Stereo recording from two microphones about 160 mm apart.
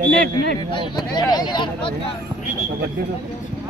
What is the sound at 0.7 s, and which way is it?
Speech, 25° left (ahead or behind).